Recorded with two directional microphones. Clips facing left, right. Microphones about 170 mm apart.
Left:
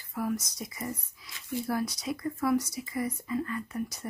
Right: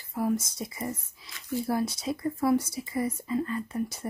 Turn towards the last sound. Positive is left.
turn(degrees=-30)  # may be behind; listen again after turning